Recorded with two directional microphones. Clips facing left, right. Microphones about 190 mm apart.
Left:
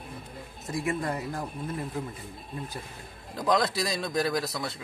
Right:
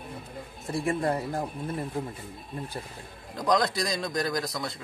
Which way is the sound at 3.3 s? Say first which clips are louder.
Right 1 dB; centre (ahead or behind).